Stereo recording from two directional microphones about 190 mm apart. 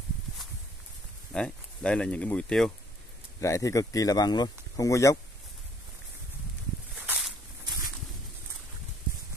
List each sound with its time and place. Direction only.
1.3 s speech: 5° left (ahead or behind)
3.3 s speech: 15° left (ahead or behind)
7.0 s a sound: 5° right (ahead or behind)